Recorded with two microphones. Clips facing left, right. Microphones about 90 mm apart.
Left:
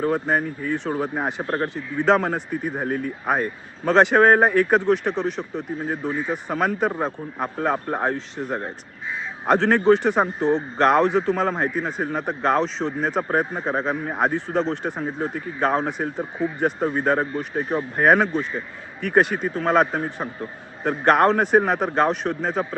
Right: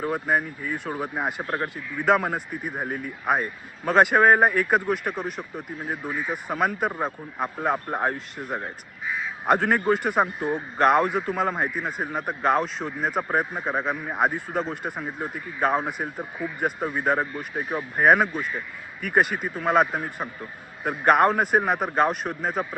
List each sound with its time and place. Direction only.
0.0 s speech: 5° right (ahead or behind)
13.4 s speech: 30° left (ahead or behind)
13.7 s speech: 5° right (ahead or behind)